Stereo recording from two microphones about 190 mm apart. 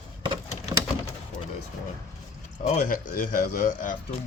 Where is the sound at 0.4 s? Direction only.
35° left (ahead or behind).